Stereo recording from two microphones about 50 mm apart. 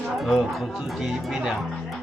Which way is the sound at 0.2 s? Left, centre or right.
Centre.